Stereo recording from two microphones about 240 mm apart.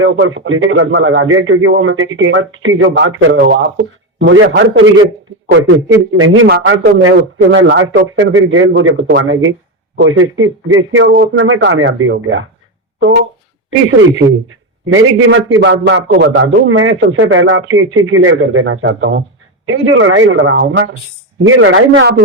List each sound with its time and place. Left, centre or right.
0.0 s a man's voice: right
6.5 s a man's voice: right
11.1 s a man's voice: right
14.9 s a man's voice: right